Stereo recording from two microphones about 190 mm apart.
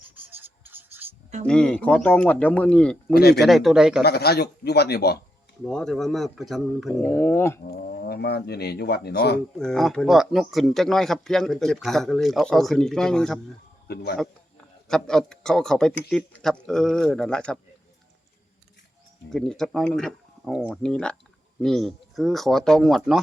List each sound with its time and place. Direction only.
0.1 s a sound: 10° right (ahead or behind)
1.5 s speech: 5° left (ahead or behind)
3.1 s speech: 55° left (ahead or behind)
3.4 s speech: centre (ahead or behind)
4.0 s speech: 55° left (ahead or behind)
5.6 s speech: centre (ahead or behind)
7.7 s speech: 55° left (ahead or behind)
9.6 s speech: centre (ahead or behind)
13.8 s speech: 55° left (ahead or behind)
14.8 s speech: 5° left (ahead or behind)
19.3 s speech: 5° left (ahead or behind)